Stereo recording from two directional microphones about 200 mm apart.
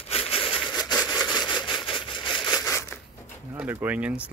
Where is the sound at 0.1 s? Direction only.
30° left (ahead or behind).